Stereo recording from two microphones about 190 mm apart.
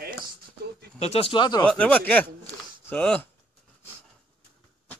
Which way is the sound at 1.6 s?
5° left (ahead or behind).